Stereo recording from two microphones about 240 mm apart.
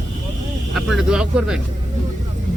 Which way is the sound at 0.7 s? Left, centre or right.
Centre.